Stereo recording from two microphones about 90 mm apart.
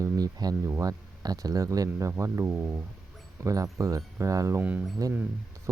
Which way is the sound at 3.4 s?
40° right (ahead or behind).